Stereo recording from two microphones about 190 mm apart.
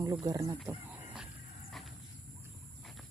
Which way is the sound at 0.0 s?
20° right (ahead or behind).